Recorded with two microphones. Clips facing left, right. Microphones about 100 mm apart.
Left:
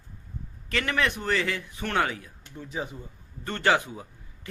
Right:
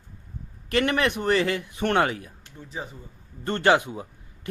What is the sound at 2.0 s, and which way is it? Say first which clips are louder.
Speech: right 1 dB; 55° right (ahead or behind).